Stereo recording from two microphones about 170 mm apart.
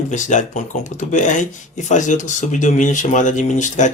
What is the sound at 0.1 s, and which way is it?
Speech, 45° left (ahead or behind).